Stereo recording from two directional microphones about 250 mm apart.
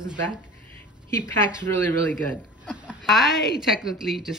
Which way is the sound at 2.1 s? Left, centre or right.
Centre.